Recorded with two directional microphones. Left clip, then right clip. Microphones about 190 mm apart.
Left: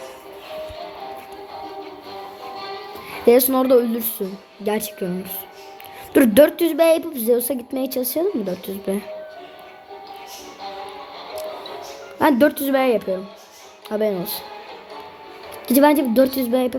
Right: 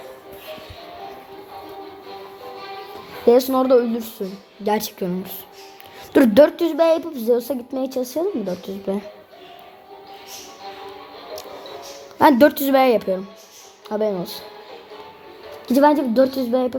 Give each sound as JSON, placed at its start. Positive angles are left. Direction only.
{"t": 3.2, "sound": "a woman's voice", "side_deg": 20}
{"t": 4.6, "sound": "a woman's voice", "side_deg": 5}
{"t": 12.2, "sound": "a woman's voice", "side_deg": -5}
{"t": 13.9, "sound": "a woman's voice", "side_deg": 10}
{"t": 15.6, "sound": "a woman's voice", "side_deg": 20}